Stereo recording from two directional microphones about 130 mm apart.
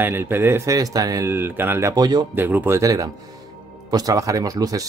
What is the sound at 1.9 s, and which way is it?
Speech, 30° right (ahead or behind).